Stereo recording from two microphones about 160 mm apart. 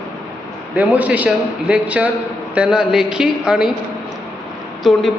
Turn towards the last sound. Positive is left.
turn(degrees=0)  # may be behind; listen again after turning